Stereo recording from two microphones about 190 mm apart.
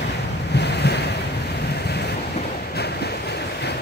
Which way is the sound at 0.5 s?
60° left (ahead or behind).